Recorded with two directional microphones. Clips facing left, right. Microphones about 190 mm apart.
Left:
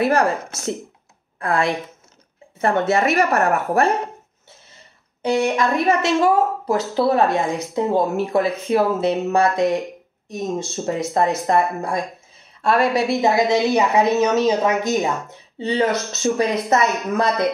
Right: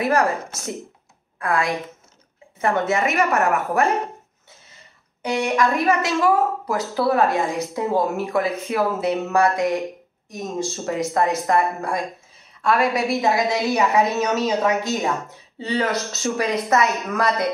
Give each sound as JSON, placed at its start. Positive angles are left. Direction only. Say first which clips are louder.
{"t": 0.0, "sound": "a woman's voice", "louder": "left 2 dB", "side_deg": 30}
{"t": 1.4, "sound": "a woman's voice", "louder": "left 2 dB", "side_deg": 30}
{"t": 5.2, "sound": "a woman's voice", "louder": "left 2 dB", "side_deg": 25}